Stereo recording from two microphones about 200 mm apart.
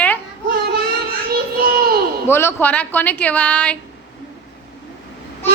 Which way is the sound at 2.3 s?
10° left (ahead or behind).